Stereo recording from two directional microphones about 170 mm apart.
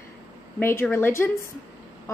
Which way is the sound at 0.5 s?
10° left (ahead or behind).